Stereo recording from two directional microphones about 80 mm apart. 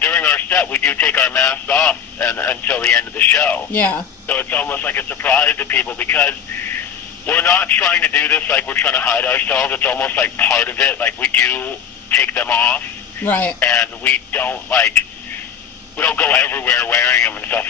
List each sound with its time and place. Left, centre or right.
0.0 s speech: left
16.0 s speech: left